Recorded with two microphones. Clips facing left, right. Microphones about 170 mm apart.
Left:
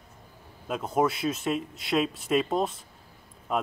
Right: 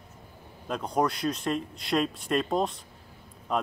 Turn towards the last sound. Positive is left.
turn(degrees=5)  # may be behind; listen again after turning